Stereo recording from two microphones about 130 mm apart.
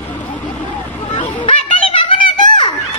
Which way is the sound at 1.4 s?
40° left (ahead or behind).